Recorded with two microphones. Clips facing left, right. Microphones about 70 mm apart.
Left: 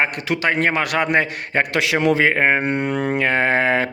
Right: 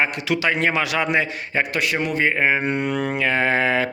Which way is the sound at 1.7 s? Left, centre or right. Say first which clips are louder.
Left 8 dB; left.